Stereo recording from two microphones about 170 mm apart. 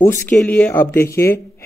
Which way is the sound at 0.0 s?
15° left (ahead or behind).